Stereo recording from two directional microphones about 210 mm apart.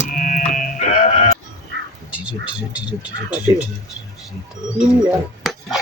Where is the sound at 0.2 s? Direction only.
40° left (ahead or behind).